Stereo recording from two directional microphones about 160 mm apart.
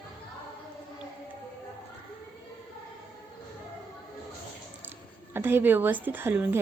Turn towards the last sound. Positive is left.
turn(degrees=-15)  # may be behind; listen again after turning